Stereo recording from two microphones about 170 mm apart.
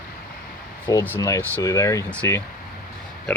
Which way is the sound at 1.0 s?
15° left (ahead or behind).